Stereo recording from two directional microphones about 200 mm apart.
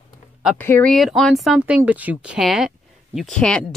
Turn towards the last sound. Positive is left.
turn(degrees=5)  # may be behind; listen again after turning